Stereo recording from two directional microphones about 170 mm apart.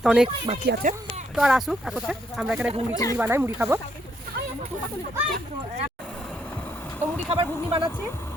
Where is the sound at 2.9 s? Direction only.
20° left (ahead or behind).